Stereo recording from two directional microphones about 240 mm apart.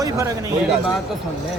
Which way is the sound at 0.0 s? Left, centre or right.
Centre.